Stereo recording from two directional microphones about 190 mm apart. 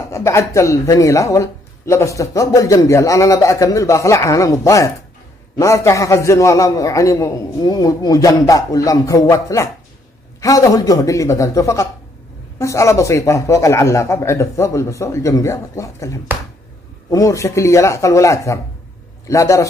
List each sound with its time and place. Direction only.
0.1 s speech: 15° left (ahead or behind)